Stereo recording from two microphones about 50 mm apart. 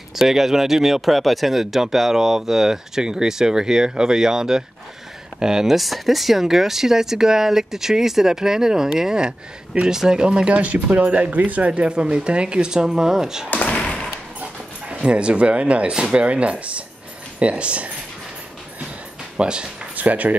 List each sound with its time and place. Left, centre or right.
0.1 s speech: centre
13.5 s a sound: left
14.9 s speech: right
19.3 s speech: centre
20.0 s speech: right